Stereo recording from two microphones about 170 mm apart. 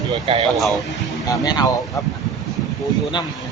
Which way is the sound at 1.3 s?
20° left (ahead or behind).